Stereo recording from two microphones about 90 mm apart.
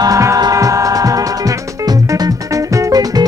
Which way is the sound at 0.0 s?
40° right (ahead or behind).